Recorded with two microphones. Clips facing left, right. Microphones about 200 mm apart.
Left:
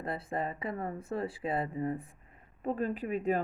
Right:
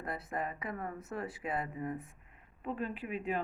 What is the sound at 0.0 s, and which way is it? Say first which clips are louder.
Speech: left 3 dB; 30° left (ahead or behind).